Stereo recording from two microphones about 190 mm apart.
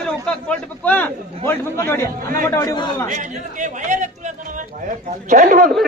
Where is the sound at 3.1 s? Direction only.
40° right (ahead or behind).